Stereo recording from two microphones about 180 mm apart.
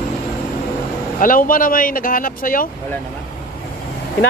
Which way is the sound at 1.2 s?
50° left (ahead or behind).